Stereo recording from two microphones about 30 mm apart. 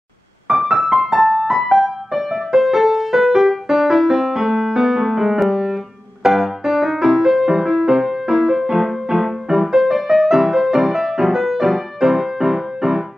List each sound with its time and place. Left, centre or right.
0.5 s music: centre
6.2 s music: right
6.6 s music: centre